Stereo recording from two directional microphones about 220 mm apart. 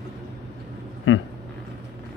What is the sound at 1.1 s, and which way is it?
Speech, 60° left (ahead or behind).